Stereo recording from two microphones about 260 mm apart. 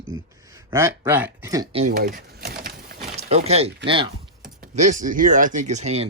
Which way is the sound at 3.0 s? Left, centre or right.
Right.